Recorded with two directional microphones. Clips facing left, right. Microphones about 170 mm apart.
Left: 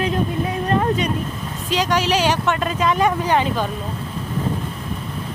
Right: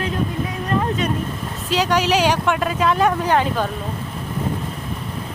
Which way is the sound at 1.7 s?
10° right (ahead or behind).